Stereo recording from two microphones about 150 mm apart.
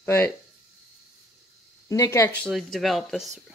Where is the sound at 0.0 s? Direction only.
15° left (ahead or behind).